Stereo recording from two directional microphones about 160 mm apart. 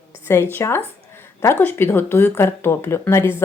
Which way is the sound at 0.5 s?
15° left (ahead or behind).